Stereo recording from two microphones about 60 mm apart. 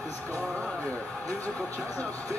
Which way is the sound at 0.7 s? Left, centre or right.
Left.